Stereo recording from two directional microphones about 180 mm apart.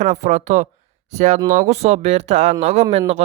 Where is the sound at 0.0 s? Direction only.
40° right (ahead or behind).